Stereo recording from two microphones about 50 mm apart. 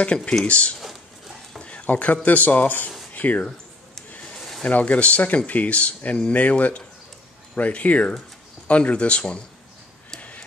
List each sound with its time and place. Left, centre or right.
0.0 s speech: left
0.7 s a sound: centre
1.6 s stir: left
2.2 s speech: left
3.1 s a sound: left
4.6 s speech: left